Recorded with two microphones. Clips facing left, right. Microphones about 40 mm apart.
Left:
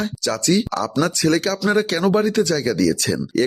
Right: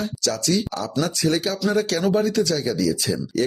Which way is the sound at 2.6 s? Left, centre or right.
Left.